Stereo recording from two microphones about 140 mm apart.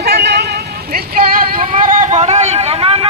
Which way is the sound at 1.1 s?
90° right.